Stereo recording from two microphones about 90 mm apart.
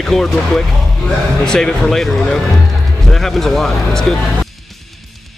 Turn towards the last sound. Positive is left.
turn(degrees=0)  # may be behind; listen again after turning